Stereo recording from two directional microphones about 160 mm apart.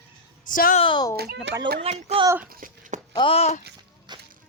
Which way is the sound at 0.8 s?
30° left (ahead or behind).